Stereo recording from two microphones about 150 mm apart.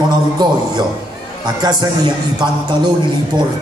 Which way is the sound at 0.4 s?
30° right (ahead or behind).